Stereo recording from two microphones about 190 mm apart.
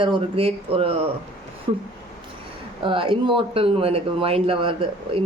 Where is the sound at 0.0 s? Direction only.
30° right (ahead or behind).